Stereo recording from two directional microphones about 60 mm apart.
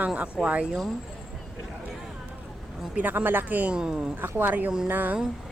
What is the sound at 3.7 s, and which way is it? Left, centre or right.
Speech, centre.